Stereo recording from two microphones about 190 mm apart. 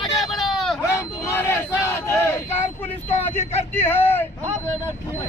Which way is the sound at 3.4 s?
35° left (ahead or behind).